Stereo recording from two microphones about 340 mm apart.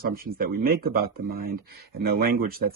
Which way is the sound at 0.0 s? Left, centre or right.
Right.